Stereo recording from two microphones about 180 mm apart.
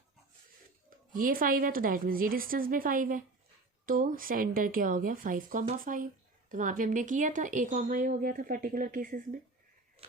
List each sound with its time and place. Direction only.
0.9 s speech: 50° right (ahead or behind)